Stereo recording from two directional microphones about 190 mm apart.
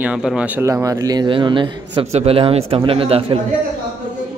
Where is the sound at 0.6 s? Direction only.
15° right (ahead or behind).